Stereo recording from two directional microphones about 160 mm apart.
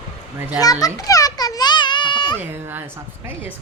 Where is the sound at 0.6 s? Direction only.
25° left (ahead or behind).